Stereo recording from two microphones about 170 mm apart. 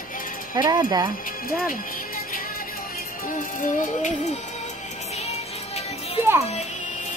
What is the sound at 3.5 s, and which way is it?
Music, 50° left (ahead or behind).